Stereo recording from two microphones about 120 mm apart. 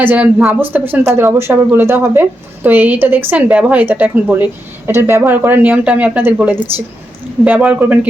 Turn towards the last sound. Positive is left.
turn(degrees=-15)  # may be behind; listen again after turning